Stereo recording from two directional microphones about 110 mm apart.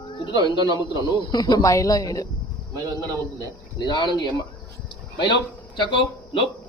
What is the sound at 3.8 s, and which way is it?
A man's voice, 40° left (ahead or behind).